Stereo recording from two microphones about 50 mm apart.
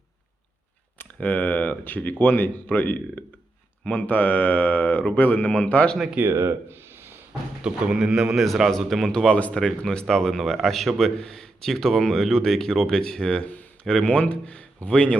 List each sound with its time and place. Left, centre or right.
1.2 s speech: left
6.3 s speech: right
7.6 s a man's voice: centre
8.7 s a man's voice: centre
13.4 s a sound: left
14.0 s speech: left